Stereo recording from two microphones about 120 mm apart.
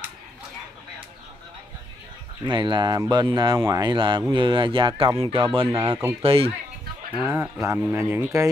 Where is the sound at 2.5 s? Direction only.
40° right (ahead or behind).